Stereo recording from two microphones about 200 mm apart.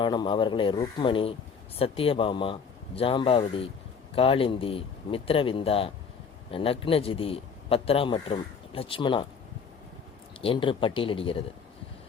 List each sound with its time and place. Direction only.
0.0 s a man's voice: 25° left (ahead or behind)
10.4 s a man's voice: 25° left (ahead or behind)